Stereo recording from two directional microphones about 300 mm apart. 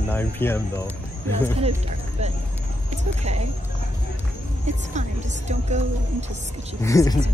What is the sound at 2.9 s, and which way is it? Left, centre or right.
Speech, right.